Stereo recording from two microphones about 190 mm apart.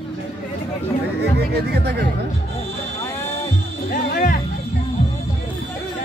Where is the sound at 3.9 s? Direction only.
45° left (ahead or behind).